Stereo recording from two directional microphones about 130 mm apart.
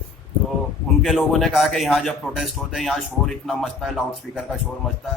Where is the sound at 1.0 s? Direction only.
Centre (ahead or behind).